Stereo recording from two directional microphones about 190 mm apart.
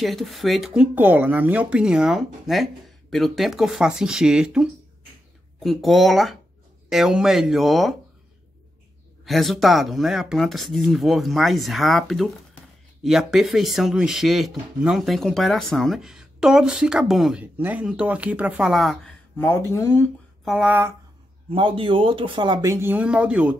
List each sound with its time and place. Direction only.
0.0 s speech: centre (ahead or behind)
9.2 s speech: centre (ahead or behind)
19.3 s speech: 15° left (ahead or behind)
20.4 s speech: 5° right (ahead or behind)
21.5 s speech: 25° right (ahead or behind); by 23.5 s 5° right (ahead or behind)